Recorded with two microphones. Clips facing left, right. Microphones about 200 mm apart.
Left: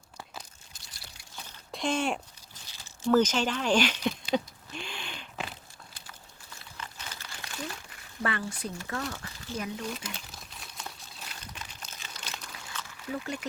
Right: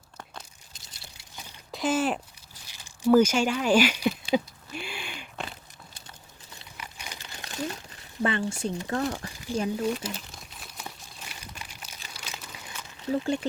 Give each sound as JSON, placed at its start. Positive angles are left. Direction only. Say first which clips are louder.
{"t": 0.7, "sound": "pour", "louder": "right 1 dB", "side_deg": -15}
{"t": 1.7, "sound": "speech", "louder": "right 3 dB", "side_deg": -5}
{"t": 2.6, "sound": "a sound", "louder": "right 5 dB", "side_deg": -15}
{"t": 6.5, "sound": "crumpling", "louder": "even", "side_deg": -15}
{"t": 8.2, "sound": "speech", "louder": "right 5 dB", "side_deg": -25}
{"t": 9.5, "sound": "speech", "louder": "right 7 dB", "side_deg": -10}
{"t": 9.9, "sound": "crumpling", "louder": "right 7 dB", "side_deg": 0}
{"t": 10.8, "sound": "a sound", "louder": "right 2 dB", "side_deg": -5}
{"t": 12.0, "sound": "crumpling", "louder": "right 1 dB", "side_deg": -10}
{"t": 12.6, "sound": "a sound", "louder": "right 8 dB", "side_deg": -20}